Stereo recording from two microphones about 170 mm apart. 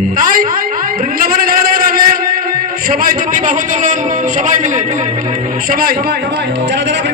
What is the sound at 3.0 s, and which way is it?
Speech, 50° right (ahead or behind).